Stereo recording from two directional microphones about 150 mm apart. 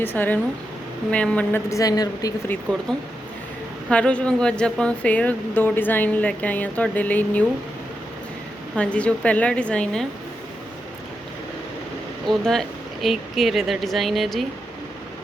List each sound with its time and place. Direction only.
0.0 s speech: 15° left (ahead or behind)
3.8 s speech: 5° left (ahead or behind)
8.7 s speech: 10° left (ahead or behind)
12.3 s a woman's voice: 5° left (ahead or behind)